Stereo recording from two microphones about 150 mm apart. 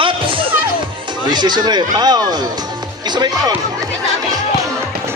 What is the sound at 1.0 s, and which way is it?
Speech, 30° right (ahead or behind).